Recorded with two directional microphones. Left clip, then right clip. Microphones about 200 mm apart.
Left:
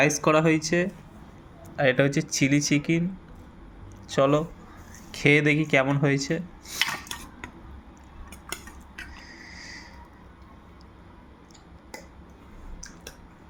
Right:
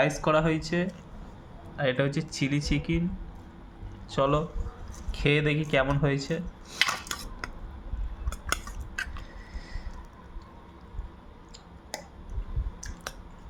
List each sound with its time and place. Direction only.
0.0 s speech: 20° left (ahead or behind)
4.1 s speech: 15° left (ahead or behind)
6.7 s cutlery: 25° right (ahead or behind)